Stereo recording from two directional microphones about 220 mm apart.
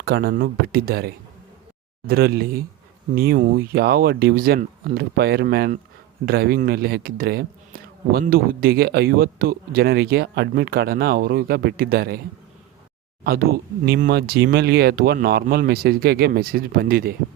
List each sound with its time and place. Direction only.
0.0 s a man's voice: 45° right (ahead or behind)
13.2 s a man's voice: 45° right (ahead or behind)